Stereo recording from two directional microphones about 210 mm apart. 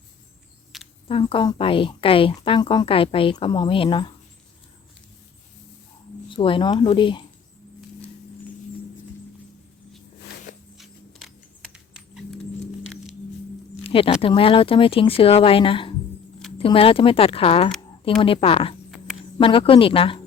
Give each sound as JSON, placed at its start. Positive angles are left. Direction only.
{"t": 1.0, "sound": "a woman's voice", "side_deg": 25}
{"t": 6.2, "sound": "a woman's voice", "side_deg": 25}
{"t": 10.8, "sound": "a sound", "side_deg": 0}
{"t": 13.8, "sound": "a woman's voice", "side_deg": 25}